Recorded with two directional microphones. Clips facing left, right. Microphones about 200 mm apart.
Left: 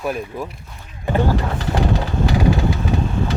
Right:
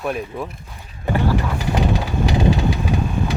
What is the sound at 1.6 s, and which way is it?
Vehicle, 15° right (ahead or behind).